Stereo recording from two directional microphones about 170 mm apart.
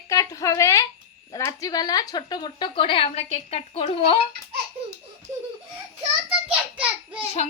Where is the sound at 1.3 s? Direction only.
20° left (ahead or behind); by 4.2 s 35° left (ahead or behind).